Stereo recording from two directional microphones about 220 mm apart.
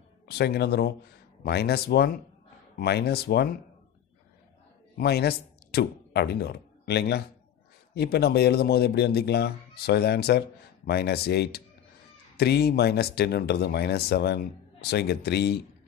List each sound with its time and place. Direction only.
0.3 s speech: 45° left (ahead or behind)
4.9 s speech: 45° left (ahead or behind)